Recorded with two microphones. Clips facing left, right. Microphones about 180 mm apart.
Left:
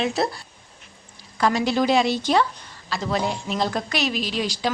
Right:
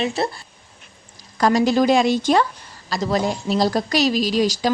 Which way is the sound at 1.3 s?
40° right (ahead or behind).